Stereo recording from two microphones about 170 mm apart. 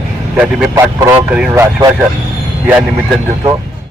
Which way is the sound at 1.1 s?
10° right (ahead or behind).